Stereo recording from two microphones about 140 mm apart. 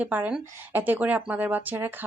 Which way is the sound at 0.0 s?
10° right (ahead or behind).